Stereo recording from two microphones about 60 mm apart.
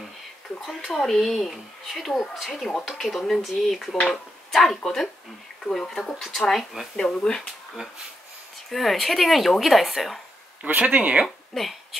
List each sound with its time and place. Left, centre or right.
0.7 s speech: centre
7.0 s speech: centre
8.6 s speech: centre
10.6 s speech: right
11.2 s a sound: centre